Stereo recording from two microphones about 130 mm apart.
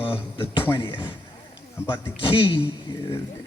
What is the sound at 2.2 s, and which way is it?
Speech, 40° left (ahead or behind).